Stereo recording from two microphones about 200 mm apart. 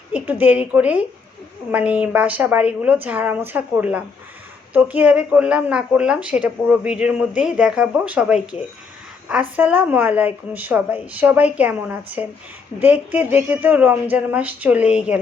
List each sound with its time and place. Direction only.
0.1 s a woman's voice: 10° right (ahead or behind)